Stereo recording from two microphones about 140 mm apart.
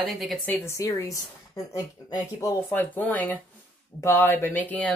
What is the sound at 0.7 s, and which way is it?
Speech, 20° left (ahead or behind).